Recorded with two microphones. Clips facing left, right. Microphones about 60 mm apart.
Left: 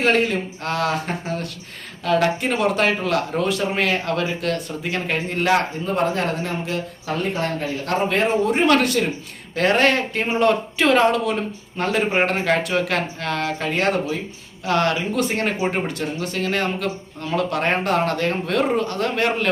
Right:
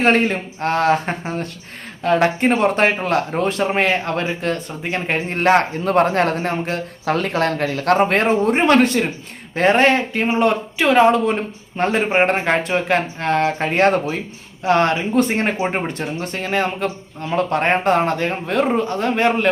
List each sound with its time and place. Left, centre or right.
0.0 s speech: right
5.8 s a man's voice: right
8.6 s a man's voice: right
10.4 s speech: centre
11.8 s a man's voice: right
14.6 s a man's voice: right